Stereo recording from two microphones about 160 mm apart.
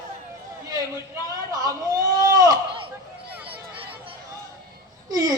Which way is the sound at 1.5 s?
25° right (ahead or behind).